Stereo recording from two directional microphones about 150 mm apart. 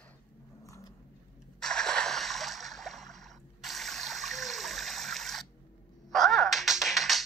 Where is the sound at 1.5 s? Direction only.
5° left (ahead or behind).